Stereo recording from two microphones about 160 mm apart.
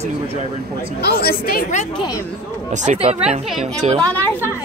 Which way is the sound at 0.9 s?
75° left (ahead or behind).